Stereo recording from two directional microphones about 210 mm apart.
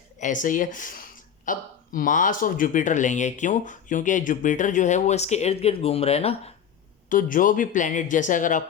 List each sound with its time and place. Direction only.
0.2 s speech: 40° left (ahead or behind)
7.1 s speech: 40° left (ahead or behind)